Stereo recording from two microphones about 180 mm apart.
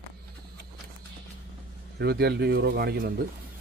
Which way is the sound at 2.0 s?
60° right (ahead or behind).